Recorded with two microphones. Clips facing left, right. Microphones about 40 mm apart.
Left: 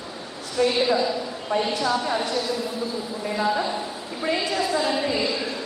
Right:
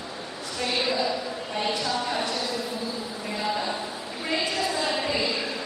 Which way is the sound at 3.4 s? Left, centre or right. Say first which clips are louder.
Left 4 dB; centre.